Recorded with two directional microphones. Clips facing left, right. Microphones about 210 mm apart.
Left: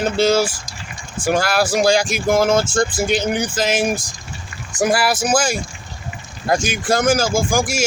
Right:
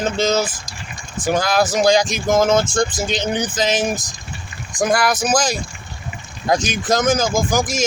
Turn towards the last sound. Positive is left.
turn(degrees=10)  # may be behind; listen again after turning